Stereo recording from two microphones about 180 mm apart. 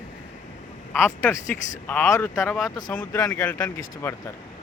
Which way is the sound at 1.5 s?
10° left (ahead or behind).